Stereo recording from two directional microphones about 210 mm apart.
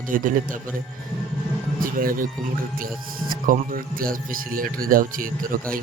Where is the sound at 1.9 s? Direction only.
40° right (ahead or behind).